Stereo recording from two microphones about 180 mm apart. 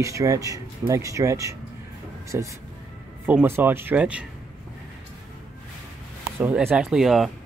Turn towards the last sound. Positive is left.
turn(degrees=0)  # may be behind; listen again after turning